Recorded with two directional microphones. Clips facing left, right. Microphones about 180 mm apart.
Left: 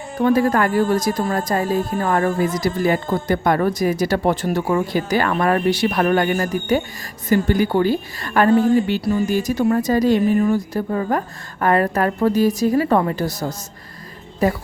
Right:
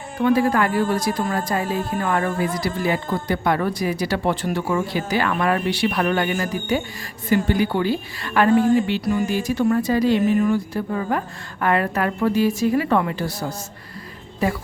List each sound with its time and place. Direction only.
0.2 s a woman's voice: 45° left (ahead or behind)